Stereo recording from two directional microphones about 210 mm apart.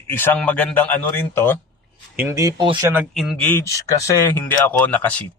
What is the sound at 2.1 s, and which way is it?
Speech, 15° right (ahead or behind).